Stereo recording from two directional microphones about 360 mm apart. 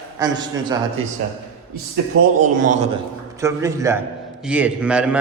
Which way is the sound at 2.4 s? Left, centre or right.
Right.